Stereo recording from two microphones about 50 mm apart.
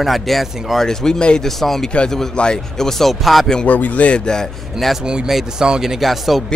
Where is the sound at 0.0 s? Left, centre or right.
Centre.